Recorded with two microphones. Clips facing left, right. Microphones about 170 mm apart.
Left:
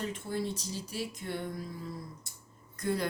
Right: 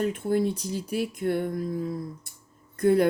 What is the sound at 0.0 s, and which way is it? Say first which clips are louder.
Speech: right 10 dB; 55° right (ahead or behind).